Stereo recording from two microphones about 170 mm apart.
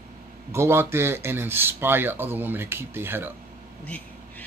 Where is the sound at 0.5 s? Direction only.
15° right (ahead or behind).